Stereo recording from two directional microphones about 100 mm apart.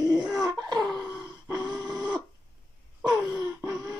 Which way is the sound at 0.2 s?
5° right (ahead or behind).